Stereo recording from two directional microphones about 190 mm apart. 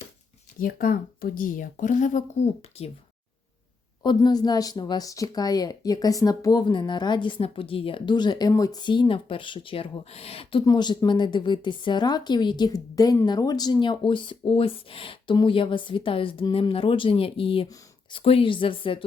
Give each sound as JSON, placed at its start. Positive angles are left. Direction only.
{"t": 0.6, "sound": "speech", "side_deg": 50}
{"t": 4.0, "sound": "a woman's voice", "side_deg": 20}